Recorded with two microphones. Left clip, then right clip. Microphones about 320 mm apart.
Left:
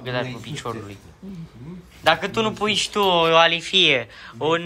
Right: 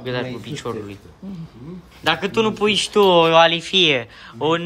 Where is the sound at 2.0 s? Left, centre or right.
Centre.